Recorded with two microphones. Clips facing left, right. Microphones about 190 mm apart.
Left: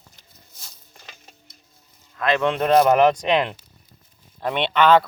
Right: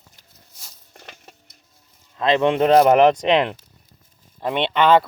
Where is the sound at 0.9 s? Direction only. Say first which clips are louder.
Right 6 dB; 70° right (ahead or behind).